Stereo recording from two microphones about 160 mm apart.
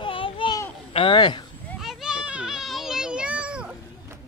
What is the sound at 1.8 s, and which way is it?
Children playing, 5° right (ahead or behind).